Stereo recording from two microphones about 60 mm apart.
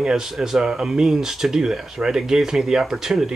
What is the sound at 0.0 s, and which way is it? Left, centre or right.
Speech, centre.